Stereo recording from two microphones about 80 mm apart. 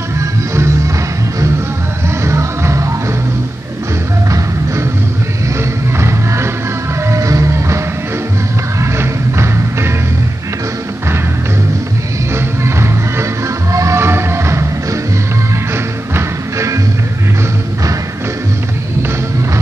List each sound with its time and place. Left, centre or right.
2.2 s music: right
5.9 s music: right
8.9 s music: right
12.6 s music: right